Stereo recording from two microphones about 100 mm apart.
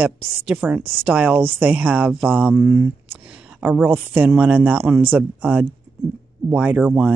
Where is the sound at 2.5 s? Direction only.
30° right (ahead or behind).